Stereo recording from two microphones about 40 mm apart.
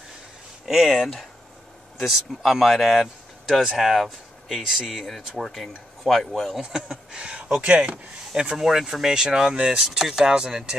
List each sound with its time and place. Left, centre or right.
0.7 s speech: centre
5.3 s speech: centre
6.5 s speech: centre; by 8.0 s right
8.4 s speech: centre
9.1 s speech: centre
9.8 s speech: centre